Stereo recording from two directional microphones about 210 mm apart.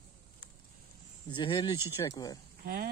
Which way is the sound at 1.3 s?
20° left (ahead or behind).